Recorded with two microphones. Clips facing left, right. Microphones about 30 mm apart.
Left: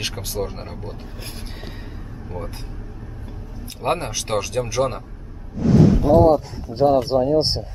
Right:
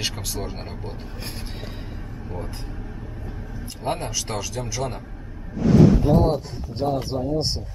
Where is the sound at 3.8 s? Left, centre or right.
Left.